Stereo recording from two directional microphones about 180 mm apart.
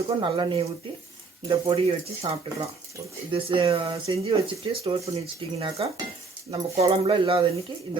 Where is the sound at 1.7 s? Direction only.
35° right (ahead or behind).